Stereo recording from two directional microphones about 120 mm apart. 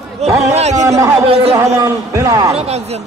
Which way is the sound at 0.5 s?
70° right (ahead or behind).